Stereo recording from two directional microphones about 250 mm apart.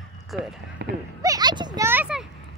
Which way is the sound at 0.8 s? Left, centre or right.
Right.